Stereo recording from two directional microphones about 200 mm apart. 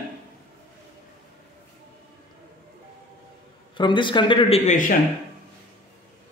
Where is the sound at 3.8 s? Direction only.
25° left (ahead or behind); by 5.0 s 40° left (ahead or behind).